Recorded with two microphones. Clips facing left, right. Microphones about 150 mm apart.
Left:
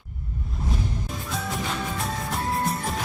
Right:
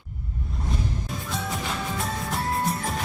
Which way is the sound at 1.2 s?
Centre (ahead or behind).